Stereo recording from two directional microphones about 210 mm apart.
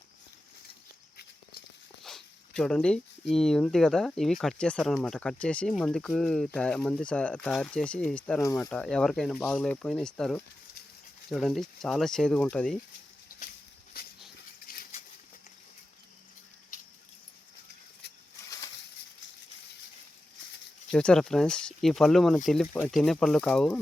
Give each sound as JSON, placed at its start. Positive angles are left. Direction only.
{"t": 2.0, "sound": "speech", "side_deg": 0}
{"t": 14.0, "sound": "dog", "side_deg": 45}
{"t": 14.7, "sound": "a sound", "side_deg": 45}
{"t": 20.9, "sound": "speech", "side_deg": 5}